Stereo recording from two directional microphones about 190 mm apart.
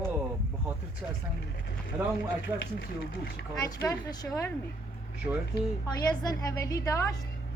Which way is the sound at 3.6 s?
20° left (ahead or behind).